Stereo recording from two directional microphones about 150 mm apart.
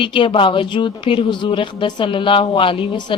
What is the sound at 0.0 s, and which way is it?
Speech, 35° left (ahead or behind).